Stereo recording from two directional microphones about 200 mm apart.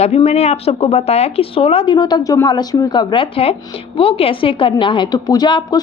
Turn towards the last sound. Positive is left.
turn(degrees=20)  # may be behind; listen again after turning